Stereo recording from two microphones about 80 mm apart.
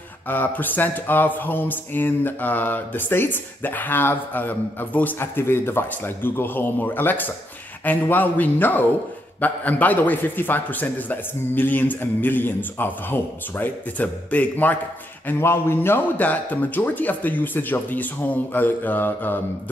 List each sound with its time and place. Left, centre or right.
0.3 s speech: left
15.2 s speech: left